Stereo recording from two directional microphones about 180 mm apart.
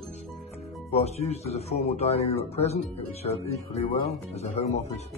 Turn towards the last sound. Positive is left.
turn(degrees=35)  # may be behind; listen again after turning